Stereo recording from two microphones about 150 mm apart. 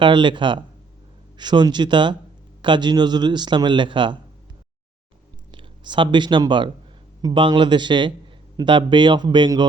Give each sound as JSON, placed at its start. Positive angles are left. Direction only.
{"t": 0.0, "sound": "speech", "side_deg": -30}
{"t": 5.5, "sound": "speech", "side_deg": -30}